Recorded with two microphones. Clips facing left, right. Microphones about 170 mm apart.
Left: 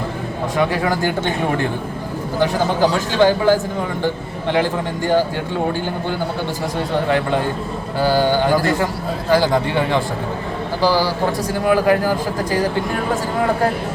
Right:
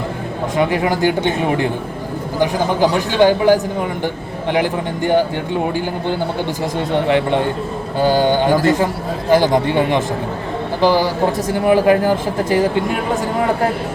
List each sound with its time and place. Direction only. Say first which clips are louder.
0.5 s a man's voice: right 2 dB; 20° right (ahead or behind)
7.9 s speech: right 2 dB; 20° right (ahead or behind)